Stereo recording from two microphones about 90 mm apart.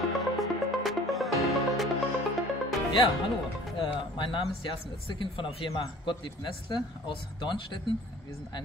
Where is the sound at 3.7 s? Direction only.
60° left (ahead or behind).